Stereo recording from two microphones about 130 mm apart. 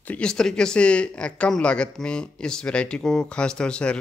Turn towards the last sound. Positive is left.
turn(degrees=5)  # may be behind; listen again after turning